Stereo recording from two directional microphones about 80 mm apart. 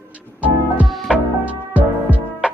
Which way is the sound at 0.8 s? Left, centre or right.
Centre.